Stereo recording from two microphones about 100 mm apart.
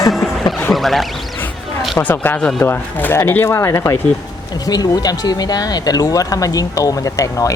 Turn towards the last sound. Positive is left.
turn(degrees=35)  # may be behind; listen again after turning